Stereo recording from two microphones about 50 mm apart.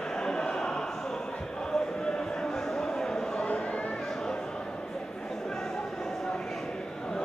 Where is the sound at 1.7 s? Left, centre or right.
Centre.